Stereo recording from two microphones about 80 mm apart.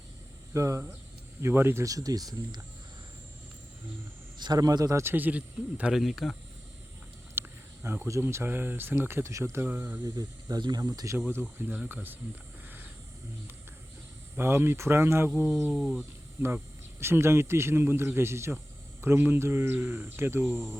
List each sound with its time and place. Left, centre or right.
0.5 s speech: right
1.4 s speech: right
1.8 s speech: right
4.4 s speech: right
5.0 s speech: right
5.9 s speech: centre
7.3 s cricket: right
8.0 s speech: right
10.0 s speech: right
11.3 s speech: right
14.3 s speech: right
15.7 s speech: centre
17.0 s speech: right